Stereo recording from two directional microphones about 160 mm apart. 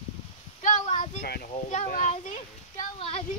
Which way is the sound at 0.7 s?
45° left (ahead or behind).